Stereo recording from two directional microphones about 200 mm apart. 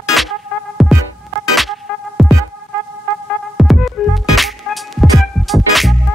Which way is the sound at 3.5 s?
Centre (ahead or behind).